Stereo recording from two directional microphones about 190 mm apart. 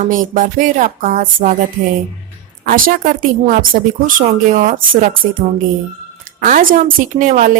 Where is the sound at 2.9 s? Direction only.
45° right (ahead or behind).